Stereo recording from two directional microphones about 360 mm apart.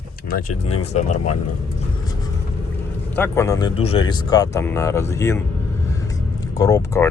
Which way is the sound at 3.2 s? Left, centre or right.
Centre.